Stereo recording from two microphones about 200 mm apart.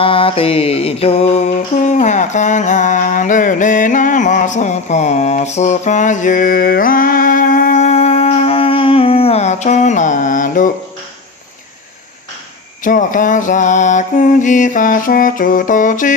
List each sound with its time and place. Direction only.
0.0 s mantra: 25° left (ahead or behind)
12.8 s mantra: 40° left (ahead or behind)